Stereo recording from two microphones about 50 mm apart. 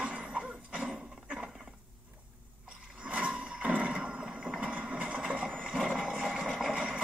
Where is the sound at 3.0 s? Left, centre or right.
Right; by 6.4 s centre.